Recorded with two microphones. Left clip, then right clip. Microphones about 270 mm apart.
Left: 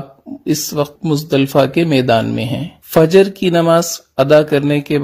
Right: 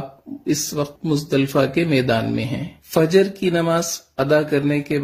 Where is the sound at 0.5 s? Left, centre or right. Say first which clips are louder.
Left 5 dB; left.